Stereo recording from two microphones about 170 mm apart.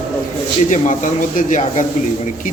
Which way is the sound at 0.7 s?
50° left (ahead or behind).